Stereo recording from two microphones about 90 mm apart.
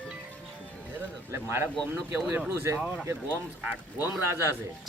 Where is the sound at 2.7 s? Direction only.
10° right (ahead or behind).